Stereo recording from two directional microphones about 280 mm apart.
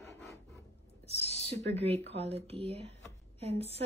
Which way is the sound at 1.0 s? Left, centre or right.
Left.